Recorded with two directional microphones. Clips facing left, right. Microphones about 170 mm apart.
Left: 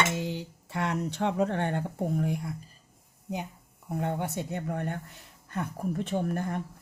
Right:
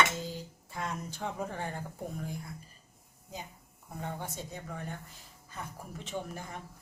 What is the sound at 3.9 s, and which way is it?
Speech, 65° left (ahead or behind).